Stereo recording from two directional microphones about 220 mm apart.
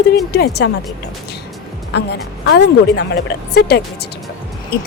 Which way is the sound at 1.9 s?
50° left (ahead or behind).